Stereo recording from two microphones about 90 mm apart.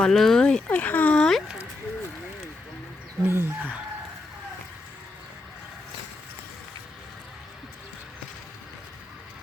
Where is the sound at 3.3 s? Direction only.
30° right (ahead or behind).